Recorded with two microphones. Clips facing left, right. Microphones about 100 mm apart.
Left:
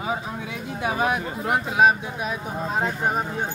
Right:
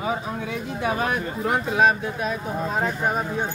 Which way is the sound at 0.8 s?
10° left (ahead or behind).